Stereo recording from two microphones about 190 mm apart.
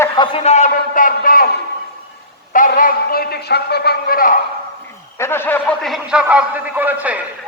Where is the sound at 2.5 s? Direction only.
45° left (ahead or behind).